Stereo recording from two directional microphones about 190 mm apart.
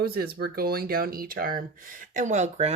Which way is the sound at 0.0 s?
55° right (ahead or behind).